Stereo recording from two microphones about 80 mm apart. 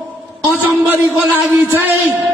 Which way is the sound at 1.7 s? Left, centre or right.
Right.